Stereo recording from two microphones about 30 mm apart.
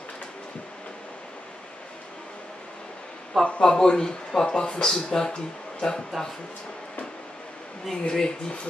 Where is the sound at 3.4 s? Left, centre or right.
Left.